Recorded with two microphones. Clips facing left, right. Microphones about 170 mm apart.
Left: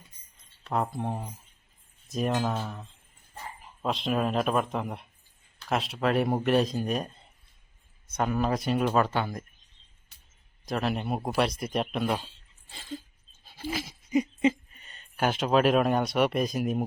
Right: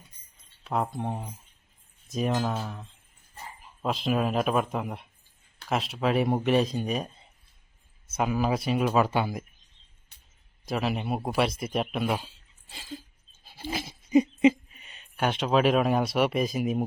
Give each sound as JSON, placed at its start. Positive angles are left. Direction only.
{"t": 0.6, "sound": "speech", "side_deg": 0}
{"t": 10.7, "sound": "speech", "side_deg": 0}
{"t": 13.7, "sound": "hoot", "side_deg": -25}
{"t": 14.8, "sound": "speech", "side_deg": -5}